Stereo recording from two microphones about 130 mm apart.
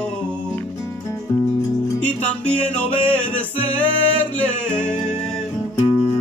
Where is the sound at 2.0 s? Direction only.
10° left (ahead or behind).